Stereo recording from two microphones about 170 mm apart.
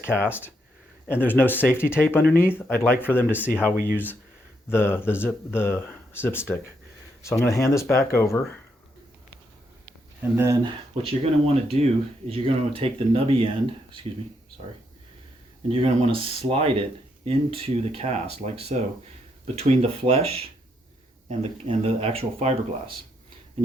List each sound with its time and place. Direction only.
0.0 s speech: 15° left (ahead or behind)
10.3 s speech: 15° right (ahead or behind)
10.6 s speech: 30° right (ahead or behind)
15.7 s speech: 30° right (ahead or behind)